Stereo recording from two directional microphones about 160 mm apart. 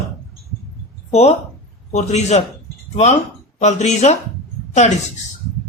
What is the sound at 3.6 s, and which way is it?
Speech, 45° left (ahead or behind).